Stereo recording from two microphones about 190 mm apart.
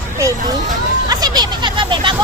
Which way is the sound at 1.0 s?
20° right (ahead or behind).